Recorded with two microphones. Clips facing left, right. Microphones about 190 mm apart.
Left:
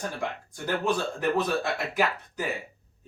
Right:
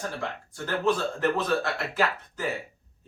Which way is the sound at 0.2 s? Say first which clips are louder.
Left 1 dB; 15° left (ahead or behind).